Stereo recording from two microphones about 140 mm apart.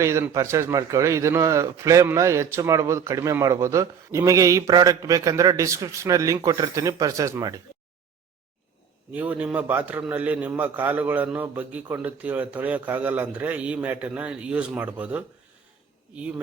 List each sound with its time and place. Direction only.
0.0 s a man's voice: 20° right (ahead or behind)
9.1 s a man's voice: 10° right (ahead or behind)